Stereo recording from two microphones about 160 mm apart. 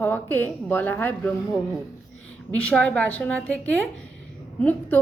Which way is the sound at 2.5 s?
10° left (ahead or behind).